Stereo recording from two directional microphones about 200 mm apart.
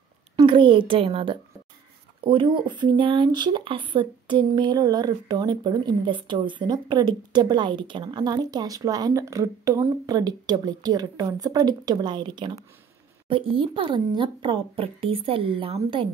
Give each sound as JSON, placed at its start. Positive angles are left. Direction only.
{"t": 0.4, "sound": "speech", "side_deg": -25}